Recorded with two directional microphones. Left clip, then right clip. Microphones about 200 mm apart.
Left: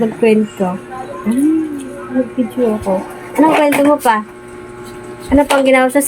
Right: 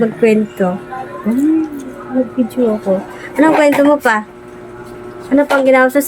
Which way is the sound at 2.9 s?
10° right (ahead or behind).